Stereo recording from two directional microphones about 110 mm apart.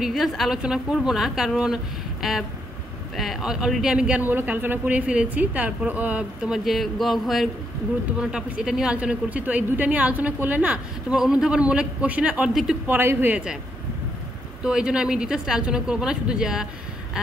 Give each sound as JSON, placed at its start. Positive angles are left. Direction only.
{"t": 0.0, "sound": "a woman's voice", "side_deg": 0}
{"t": 12.8, "sound": "a woman's voice", "side_deg": -20}
{"t": 14.6, "sound": "a woman's voice", "side_deg": -10}